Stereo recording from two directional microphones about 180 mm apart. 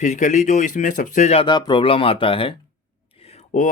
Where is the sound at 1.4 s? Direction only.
25° left (ahead or behind).